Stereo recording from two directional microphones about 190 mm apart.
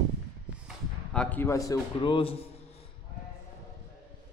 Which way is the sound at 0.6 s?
5° left (ahead or behind).